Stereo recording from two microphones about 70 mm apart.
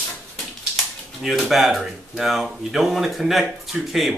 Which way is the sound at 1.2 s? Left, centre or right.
Centre.